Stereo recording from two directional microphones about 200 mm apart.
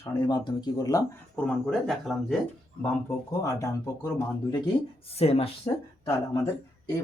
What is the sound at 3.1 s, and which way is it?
Speech, 15° left (ahead or behind).